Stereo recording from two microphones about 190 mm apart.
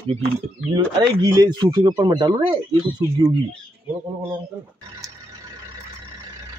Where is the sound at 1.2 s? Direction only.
20° right (ahead or behind).